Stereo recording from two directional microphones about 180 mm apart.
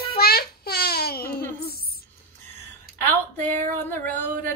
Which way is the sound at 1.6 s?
60° left (ahead or behind).